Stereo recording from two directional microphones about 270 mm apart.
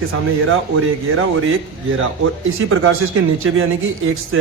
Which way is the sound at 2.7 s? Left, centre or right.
Right.